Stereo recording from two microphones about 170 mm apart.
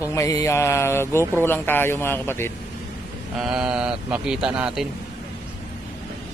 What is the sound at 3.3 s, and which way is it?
A man's voice, 5° right (ahead or behind).